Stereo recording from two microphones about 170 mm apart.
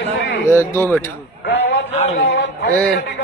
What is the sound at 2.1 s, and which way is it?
Speech, 90° left.